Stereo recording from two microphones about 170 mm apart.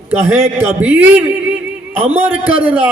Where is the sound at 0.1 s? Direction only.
15° right (ahead or behind).